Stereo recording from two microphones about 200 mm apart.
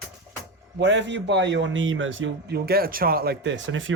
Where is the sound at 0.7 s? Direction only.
65° right (ahead or behind).